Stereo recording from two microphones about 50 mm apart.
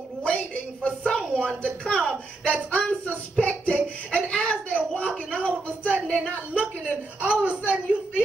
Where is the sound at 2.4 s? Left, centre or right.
Left.